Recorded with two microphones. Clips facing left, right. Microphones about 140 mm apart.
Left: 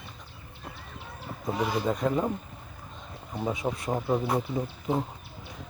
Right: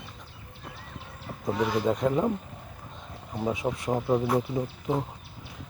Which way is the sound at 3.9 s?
Centre (ahead or behind).